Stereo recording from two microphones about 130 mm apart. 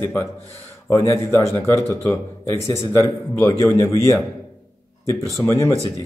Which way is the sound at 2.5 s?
20° left (ahead or behind).